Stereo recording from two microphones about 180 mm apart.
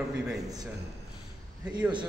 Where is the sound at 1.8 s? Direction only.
10° right (ahead or behind).